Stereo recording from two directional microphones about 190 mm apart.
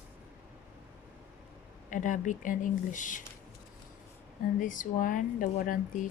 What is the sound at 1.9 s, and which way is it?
Speech, 45° left (ahead or behind).